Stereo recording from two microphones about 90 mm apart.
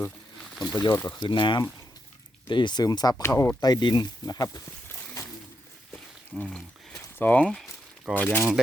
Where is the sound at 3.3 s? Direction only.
30° left (ahead or behind).